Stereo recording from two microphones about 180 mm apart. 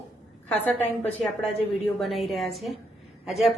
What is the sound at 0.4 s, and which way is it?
Speech, 10° left (ahead or behind).